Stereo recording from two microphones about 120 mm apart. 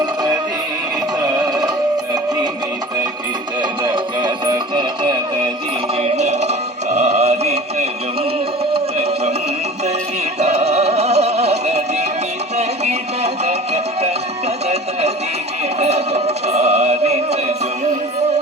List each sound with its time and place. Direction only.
0.0 s music: 35° right (ahead or behind)
3.6 s music: 40° right (ahead or behind)
6.0 s music: 65° right (ahead or behind)
8.7 s a sound: 60° right (ahead or behind)
10.4 s music: 60° right (ahead or behind)